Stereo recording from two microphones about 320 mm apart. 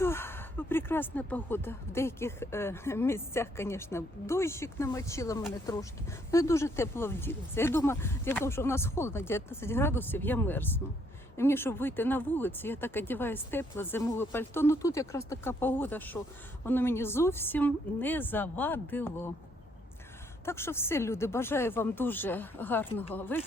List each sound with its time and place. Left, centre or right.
0.0 s speech: centre
20.4 s speech: centre